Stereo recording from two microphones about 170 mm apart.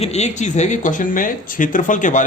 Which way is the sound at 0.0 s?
40° left (ahead or behind).